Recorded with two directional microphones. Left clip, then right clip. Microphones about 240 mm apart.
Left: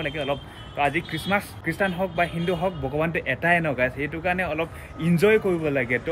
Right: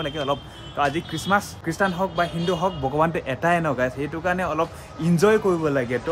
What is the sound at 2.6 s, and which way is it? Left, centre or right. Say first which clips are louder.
Speech: right 6 dB; centre.